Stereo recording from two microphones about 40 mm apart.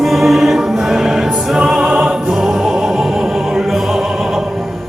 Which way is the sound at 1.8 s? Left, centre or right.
Right.